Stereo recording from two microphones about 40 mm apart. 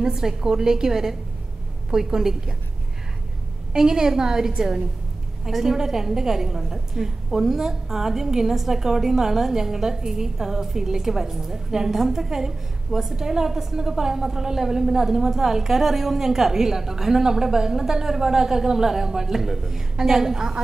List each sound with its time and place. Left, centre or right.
0.0 s a woman's voice: centre
3.7 s a woman's voice: centre